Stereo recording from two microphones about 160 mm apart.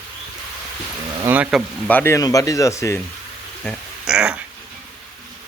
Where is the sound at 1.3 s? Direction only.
5° right (ahead or behind).